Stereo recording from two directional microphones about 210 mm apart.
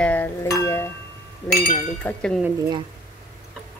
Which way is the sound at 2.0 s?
5° left (ahead or behind).